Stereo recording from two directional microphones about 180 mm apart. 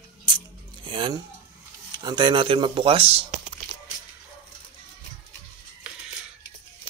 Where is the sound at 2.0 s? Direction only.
25° right (ahead or behind).